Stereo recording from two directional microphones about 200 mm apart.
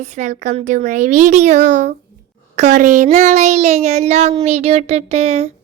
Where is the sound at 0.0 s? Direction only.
35° right (ahead or behind).